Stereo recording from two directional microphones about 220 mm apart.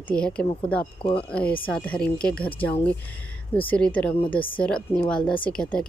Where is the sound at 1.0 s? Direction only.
25° left (ahead or behind).